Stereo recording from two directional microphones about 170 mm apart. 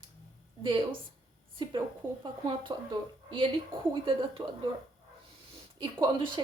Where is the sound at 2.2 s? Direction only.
30° right (ahead or behind).